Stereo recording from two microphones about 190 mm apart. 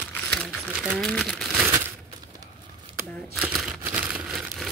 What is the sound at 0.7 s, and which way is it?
Crumpling, 5° right (ahead or behind).